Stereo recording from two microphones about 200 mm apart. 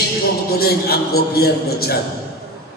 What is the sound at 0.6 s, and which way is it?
A man's voice, 50° left (ahead or behind).